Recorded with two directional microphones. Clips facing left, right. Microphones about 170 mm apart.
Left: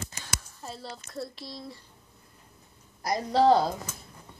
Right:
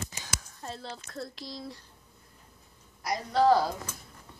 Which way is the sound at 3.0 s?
35° left (ahead or behind).